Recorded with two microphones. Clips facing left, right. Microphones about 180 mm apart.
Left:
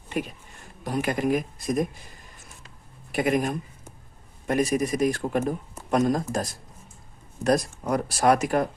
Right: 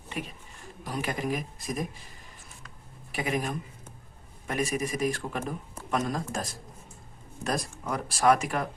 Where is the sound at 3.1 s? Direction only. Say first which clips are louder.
Left 7 dB; 50° left (ahead or behind).